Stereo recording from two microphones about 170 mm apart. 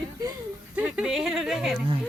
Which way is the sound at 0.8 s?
5° right (ahead or behind).